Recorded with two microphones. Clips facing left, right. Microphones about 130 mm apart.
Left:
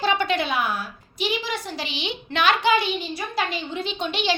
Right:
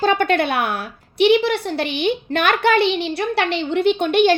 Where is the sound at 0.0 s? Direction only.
50° right (ahead or behind).